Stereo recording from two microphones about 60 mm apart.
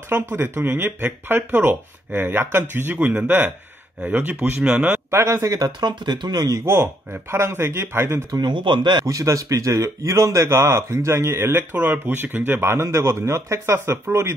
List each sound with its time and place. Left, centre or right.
0.1 s speech: right
5.1 s a man's voice: right
6.3 s speech: right
6.6 s a man's voice: right
9.0 s a man's voice: right
11.7 s a man's voice: right